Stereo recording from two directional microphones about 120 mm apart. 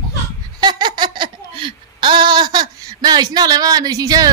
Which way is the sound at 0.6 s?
35° right (ahead or behind).